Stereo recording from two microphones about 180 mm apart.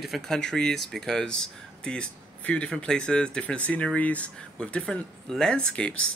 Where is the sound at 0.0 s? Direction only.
Centre (ahead or behind).